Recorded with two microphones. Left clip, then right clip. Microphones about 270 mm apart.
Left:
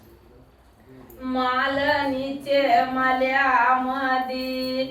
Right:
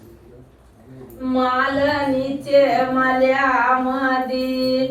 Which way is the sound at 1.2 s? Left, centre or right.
Left.